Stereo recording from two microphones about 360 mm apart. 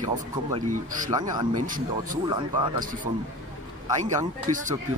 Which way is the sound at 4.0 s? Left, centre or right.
Centre.